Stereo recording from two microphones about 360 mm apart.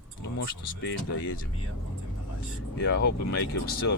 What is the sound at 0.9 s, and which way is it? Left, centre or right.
Speech, left.